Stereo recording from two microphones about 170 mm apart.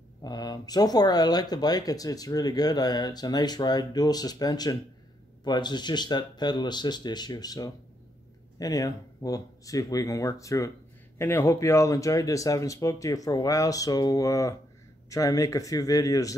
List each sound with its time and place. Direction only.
0.2 s speech: 25° left (ahead or behind)